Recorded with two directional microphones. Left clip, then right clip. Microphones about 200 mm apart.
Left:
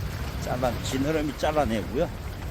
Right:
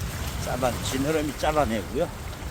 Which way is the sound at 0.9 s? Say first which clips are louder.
Right 1 dB; 10° right (ahead or behind).